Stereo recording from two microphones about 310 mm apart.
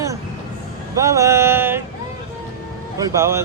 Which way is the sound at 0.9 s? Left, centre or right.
Centre.